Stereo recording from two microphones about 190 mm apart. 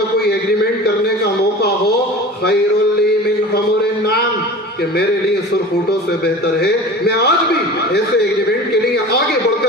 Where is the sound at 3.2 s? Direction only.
55° left (ahead or behind).